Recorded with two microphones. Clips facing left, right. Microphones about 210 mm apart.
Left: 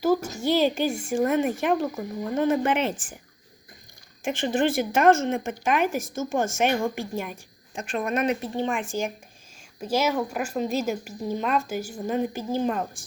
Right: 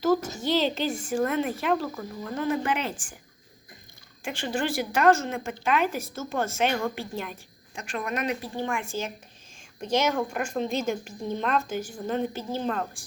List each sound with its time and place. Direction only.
0.4 s speech: 10° left (ahead or behind)
4.3 s speech: 20° left (ahead or behind)
7.8 s speech: 30° left (ahead or behind)